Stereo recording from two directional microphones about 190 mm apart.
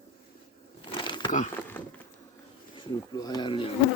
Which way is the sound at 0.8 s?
25° left (ahead or behind).